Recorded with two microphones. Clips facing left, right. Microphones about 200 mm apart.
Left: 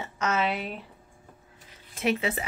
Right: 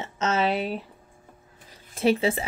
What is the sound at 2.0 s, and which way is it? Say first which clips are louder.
Speech: right 5 dB; 30° right (ahead or behind).